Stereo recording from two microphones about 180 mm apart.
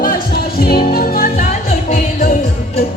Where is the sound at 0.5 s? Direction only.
60° left (ahead or behind).